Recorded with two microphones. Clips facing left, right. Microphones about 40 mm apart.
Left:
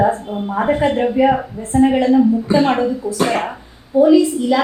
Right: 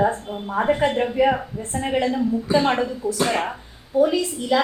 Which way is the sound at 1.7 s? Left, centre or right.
Left.